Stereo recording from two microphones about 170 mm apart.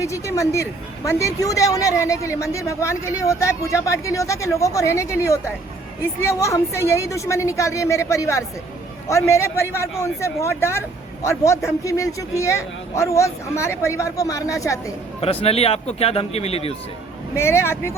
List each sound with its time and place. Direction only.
0.0 s a man's voice: 15° left (ahead or behind)
15.2 s speech: 35° left (ahead or behind)
17.3 s a man's voice: 15° left (ahead or behind)